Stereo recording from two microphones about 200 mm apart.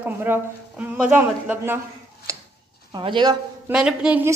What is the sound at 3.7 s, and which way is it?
Speech, 5° right (ahead or behind).